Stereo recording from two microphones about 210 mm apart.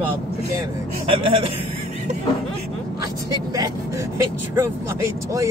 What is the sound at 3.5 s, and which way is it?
A man's voice, 15° right (ahead or behind).